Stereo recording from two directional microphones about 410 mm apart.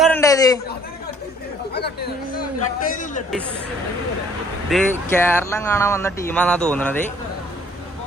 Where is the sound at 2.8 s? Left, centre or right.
Centre.